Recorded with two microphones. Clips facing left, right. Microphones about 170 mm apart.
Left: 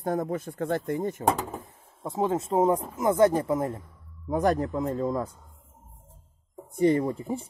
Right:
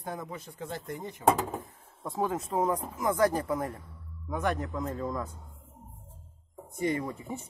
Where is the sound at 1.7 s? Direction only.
20° left (ahead or behind).